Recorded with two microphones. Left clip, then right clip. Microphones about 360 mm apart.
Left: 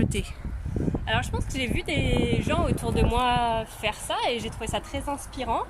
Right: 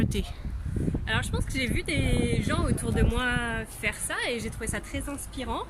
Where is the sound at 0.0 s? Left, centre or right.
Centre.